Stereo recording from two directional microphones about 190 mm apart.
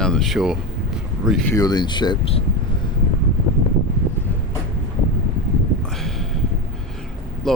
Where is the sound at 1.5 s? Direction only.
20° left (ahead or behind).